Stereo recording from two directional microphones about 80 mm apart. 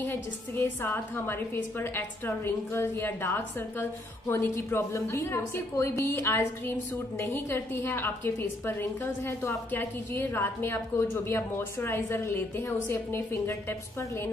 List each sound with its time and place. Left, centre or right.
0.0 s a woman's voice: left